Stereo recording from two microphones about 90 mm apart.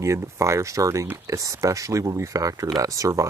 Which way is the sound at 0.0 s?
35° right (ahead or behind).